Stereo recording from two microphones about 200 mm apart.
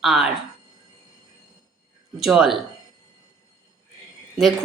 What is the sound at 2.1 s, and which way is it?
Speech, centre (ahead or behind).